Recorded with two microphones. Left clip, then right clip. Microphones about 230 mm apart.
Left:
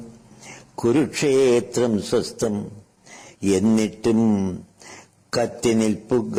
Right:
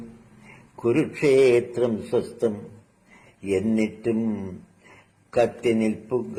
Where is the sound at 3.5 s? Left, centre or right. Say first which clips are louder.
Left 4 dB; left.